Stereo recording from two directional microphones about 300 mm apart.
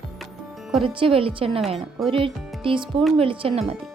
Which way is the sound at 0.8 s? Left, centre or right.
Centre.